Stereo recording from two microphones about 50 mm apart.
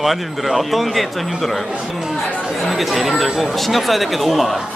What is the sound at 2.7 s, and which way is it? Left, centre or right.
Speech, centre.